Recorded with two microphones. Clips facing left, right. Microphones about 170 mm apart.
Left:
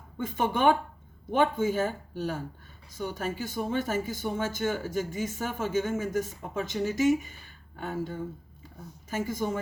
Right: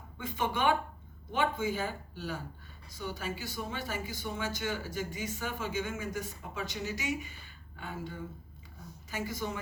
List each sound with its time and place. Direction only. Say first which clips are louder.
0.2 s speech: left 5 dB; 50° left (ahead or behind)